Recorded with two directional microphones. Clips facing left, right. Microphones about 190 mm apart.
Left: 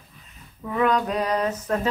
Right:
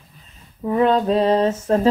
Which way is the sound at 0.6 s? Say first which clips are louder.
Right 5 dB; 30° right (ahead or behind).